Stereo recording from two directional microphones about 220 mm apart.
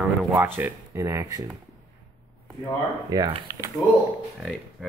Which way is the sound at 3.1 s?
20° right (ahead or behind).